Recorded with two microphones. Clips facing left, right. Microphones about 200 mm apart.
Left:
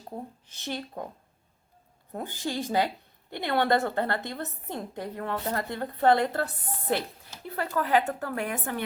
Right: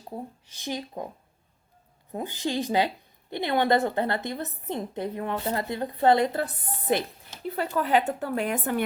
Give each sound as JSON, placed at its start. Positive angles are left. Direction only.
{"t": 0.5, "sound": "speech", "side_deg": -15}
{"t": 2.1, "sound": "a woman's voice", "side_deg": -15}